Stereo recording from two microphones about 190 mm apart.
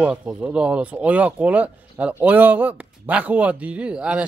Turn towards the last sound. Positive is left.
turn(degrees=-5)  # may be behind; listen again after turning